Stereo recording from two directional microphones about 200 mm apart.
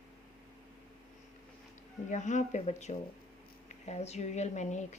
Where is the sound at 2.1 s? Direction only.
35° left (ahead or behind).